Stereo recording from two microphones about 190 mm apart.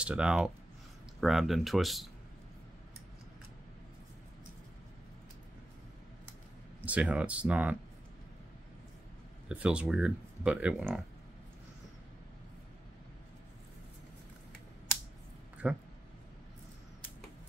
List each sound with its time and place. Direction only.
0.0 s speech: 5° right (ahead or behind)
6.8 s speech: 5° right (ahead or behind)
9.5 s speech: 5° right (ahead or behind)
15.6 s speech: 5° right (ahead or behind)